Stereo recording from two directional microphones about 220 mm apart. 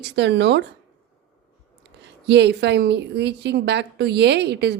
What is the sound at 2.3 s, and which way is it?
A woman's voice, 50° right (ahead or behind).